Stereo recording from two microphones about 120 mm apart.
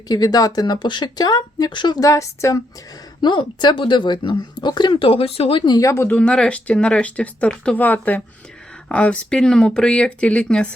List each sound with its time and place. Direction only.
0.1 s a woman's voice: 30° left (ahead or behind)
3.2 s a woman's voice: 40° left (ahead or behind); by 6.1 s 25° left (ahead or behind)
6.1 s speech: 5° left (ahead or behind)